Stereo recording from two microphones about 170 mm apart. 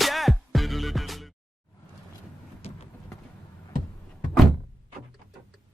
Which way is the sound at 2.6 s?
35° left (ahead or behind).